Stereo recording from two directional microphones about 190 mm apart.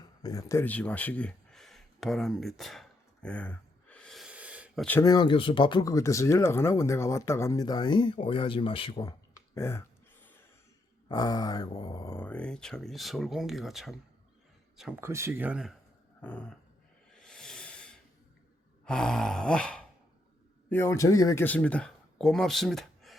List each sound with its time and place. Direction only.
0.2 s speech: 20° left (ahead or behind); by 2.8 s centre (ahead or behind)
3.2 s gasp: 5° left (ahead or behind)
4.9 s speech: 15° left (ahead or behind)
9.6 s dog: 15° left (ahead or behind)
11.1 s speech: 20° left (ahead or behind); by 13.9 s centre (ahead or behind)
15.0 s speech: 15° right (ahead or behind)
16.2 s dog: 5° left (ahead or behind)
17.1 s snake: 5° left (ahead or behind)
18.9 s speech: 5° left (ahead or behind)